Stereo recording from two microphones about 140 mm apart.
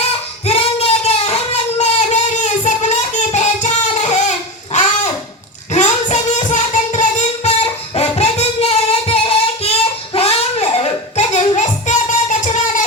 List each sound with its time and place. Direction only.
0.4 s a sound: 45° left (ahead or behind)
5.7 s music: 60° left (ahead or behind); by 9.7 s 45° left (ahead or behind)
10.2 s child singing: 45° left (ahead or behind); by 12.8 s 65° left (ahead or behind)